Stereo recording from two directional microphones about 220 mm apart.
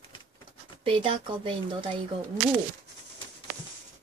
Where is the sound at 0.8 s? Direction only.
25° right (ahead or behind).